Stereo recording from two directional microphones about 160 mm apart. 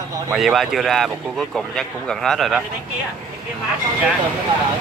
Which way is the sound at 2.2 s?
Centre (ahead or behind).